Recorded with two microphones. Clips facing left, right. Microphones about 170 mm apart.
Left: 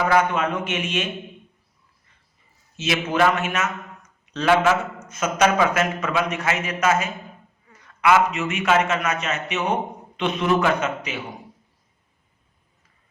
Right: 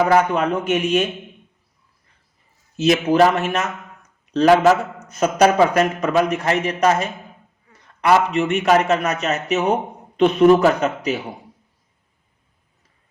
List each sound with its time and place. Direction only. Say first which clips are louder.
0.0 s a man's voice: right 4 dB; 40° right (ahead or behind)
2.7 s a man's voice: right 7 dB; 40° right (ahead or behind)